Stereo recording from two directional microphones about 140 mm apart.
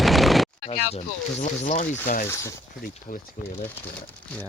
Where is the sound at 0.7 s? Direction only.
50° left (ahead or behind).